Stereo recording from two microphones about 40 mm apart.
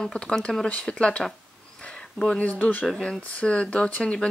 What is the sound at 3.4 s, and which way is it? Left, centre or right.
Speech, left.